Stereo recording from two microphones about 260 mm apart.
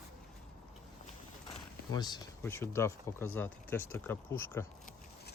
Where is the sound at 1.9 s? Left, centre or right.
Centre.